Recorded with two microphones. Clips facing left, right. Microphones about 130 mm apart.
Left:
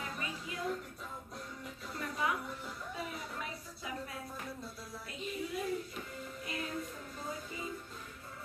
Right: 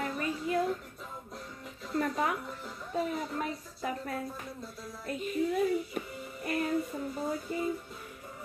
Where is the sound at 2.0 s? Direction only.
50° right (ahead or behind).